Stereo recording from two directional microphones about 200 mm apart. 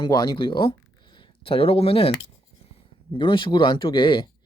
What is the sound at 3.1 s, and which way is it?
Speech, 25° left (ahead or behind).